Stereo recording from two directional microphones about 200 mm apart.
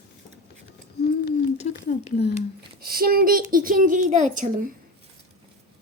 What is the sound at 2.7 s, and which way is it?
Speech, 50° right (ahead or behind).